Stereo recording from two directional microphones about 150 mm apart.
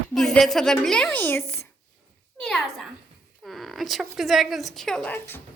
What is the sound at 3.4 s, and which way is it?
Speech, centre (ahead or behind).